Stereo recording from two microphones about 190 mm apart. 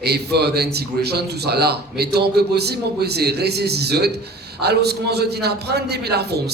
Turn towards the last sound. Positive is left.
turn(degrees=-60)  # may be behind; listen again after turning